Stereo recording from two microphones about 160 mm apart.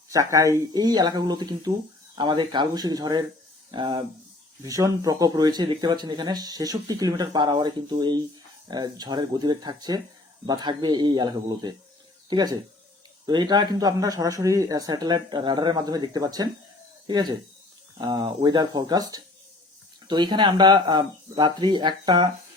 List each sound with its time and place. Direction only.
0.1 s speech: 20° right (ahead or behind)